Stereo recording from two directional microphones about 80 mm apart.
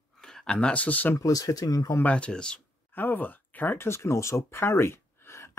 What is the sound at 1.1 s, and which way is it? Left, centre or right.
Speech, left.